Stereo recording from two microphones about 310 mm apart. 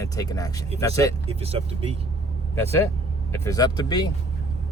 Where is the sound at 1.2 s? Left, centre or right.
Centre.